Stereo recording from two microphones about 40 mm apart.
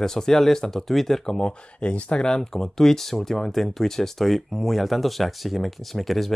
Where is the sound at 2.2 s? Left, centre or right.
Centre.